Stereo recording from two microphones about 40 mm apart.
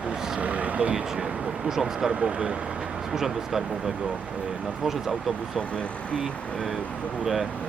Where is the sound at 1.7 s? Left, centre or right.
Centre.